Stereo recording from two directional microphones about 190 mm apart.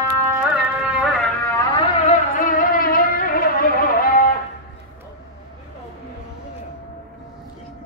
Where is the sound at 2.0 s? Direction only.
45° left (ahead or behind).